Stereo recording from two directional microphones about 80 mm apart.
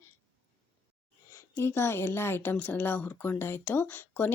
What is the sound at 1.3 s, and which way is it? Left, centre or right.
A woman's voice, left.